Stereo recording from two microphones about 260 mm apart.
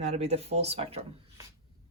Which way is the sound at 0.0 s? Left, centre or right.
Right.